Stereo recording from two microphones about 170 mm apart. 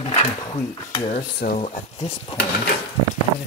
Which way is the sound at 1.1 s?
55° left (ahead or behind).